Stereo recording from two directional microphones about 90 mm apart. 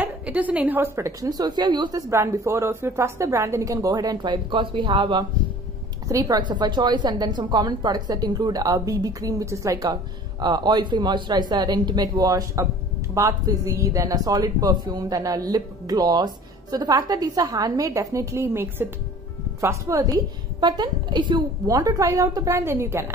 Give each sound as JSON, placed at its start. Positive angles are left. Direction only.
{"t": 0.0, "sound": "a woman's voice", "side_deg": -15}
{"t": 1.3, "sound": "a woman's voice", "side_deg": -55}
{"t": 2.0, "sound": "a woman's voice", "side_deg": -35}
{"t": 6.0, "sound": "a woman's voice", "side_deg": -45}
{"t": 10.4, "sound": "a woman's voice", "side_deg": -50}
{"t": 19.6, "sound": "a woman's voice", "side_deg": -35}
{"t": 20.6, "sound": "a woman's voice", "side_deg": -55}
{"t": 21.6, "sound": "a woman's voice", "side_deg": -40}